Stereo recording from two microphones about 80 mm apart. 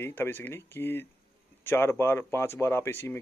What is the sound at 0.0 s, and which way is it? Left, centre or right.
Speech, left.